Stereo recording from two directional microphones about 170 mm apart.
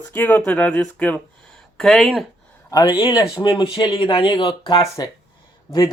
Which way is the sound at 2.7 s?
25° left (ahead or behind).